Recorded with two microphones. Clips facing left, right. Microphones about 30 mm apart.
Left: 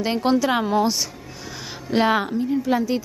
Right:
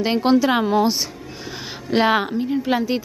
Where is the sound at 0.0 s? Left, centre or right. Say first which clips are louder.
Right 3 dB; centre.